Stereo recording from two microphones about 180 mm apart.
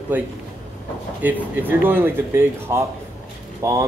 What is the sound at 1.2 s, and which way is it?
Speech, 10° right (ahead or behind).